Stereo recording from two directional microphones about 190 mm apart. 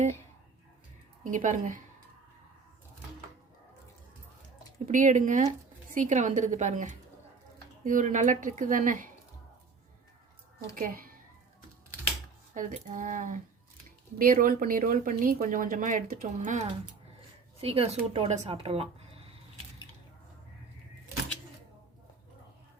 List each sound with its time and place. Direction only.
1.2 s a woman's voice: 40° right (ahead or behind)
4.9 s a woman's voice: 40° right (ahead or behind)
10.8 s speech: 45° right (ahead or behind)
12.5 s speech: 45° right (ahead or behind)